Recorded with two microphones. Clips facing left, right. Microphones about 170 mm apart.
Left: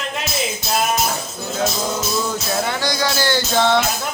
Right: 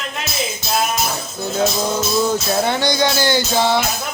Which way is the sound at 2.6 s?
25° right (ahead or behind).